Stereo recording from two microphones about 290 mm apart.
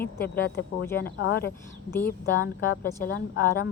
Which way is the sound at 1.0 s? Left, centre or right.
Left.